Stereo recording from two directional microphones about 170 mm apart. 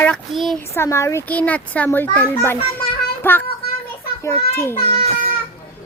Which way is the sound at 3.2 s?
10° left (ahead or behind).